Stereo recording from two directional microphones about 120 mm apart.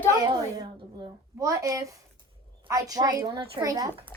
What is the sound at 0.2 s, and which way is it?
A woman's voice, 30° right (ahead or behind).